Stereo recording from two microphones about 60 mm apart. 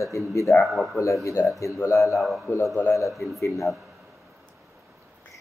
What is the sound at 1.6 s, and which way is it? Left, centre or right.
Speech, left.